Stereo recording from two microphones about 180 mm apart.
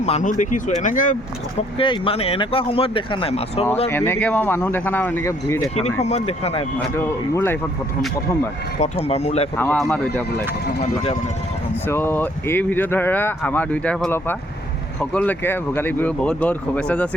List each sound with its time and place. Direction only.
0.0 s speech: 40° left (ahead or behind)
1.8 s speech: 30° left (ahead or behind)
3.8 s speech: 15° left (ahead or behind)
5.7 s speech: 35° left (ahead or behind)
6.7 s speech: 15° left (ahead or behind)
8.8 s speech: 35° left (ahead or behind)
9.7 s speech: 5° left (ahead or behind)
11.9 s speech: 10° left (ahead or behind)